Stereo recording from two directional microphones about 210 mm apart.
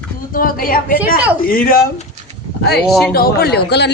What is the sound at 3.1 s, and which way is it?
Speech, 45° left (ahead or behind).